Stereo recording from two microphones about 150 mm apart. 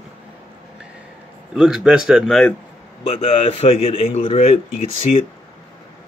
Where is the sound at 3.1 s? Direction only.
45° left (ahead or behind).